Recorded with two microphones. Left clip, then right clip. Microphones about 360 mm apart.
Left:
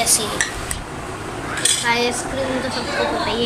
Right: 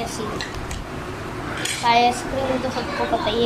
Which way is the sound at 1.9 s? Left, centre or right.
Centre.